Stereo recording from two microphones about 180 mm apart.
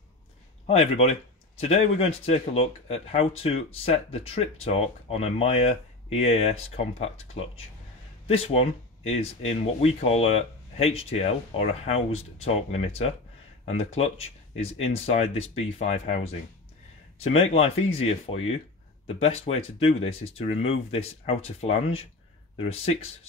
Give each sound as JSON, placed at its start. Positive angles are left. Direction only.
{"t": 0.7, "sound": "speech", "side_deg": 35}